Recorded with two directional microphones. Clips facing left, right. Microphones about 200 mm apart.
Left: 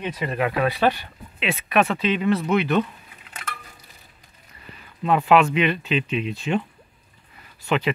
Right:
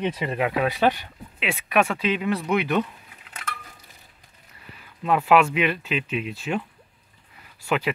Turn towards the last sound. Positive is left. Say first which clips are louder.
# left 2 dB
turn(degrees=-5)  # may be behind; listen again after turning